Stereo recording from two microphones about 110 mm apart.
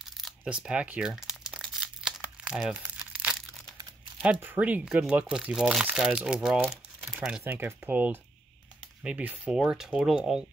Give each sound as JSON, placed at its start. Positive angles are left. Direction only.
{"t": 0.2, "sound": "crumpling", "side_deg": -10}
{"t": 4.2, "sound": "speech", "side_deg": -15}
{"t": 7.4, "sound": "speech", "side_deg": -20}